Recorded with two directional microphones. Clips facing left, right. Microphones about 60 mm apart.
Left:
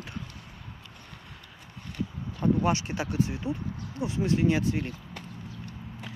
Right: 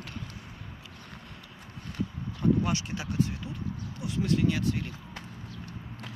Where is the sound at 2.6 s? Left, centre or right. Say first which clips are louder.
Left 4 dB; left.